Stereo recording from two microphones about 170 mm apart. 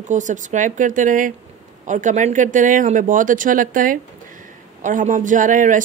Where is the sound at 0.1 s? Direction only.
45° right (ahead or behind).